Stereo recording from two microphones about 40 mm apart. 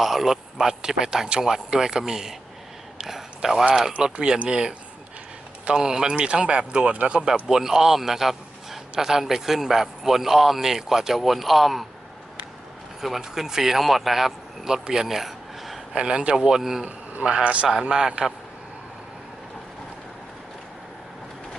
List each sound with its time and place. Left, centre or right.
0.0 s speech: centre
3.0 s a sound: centre
4.0 s a man's voice: centre
13.0 s speech: centre
15.9 s speech: right
16.3 s speech: centre
16.8 s a man's voice: right
17.8 s speech: centre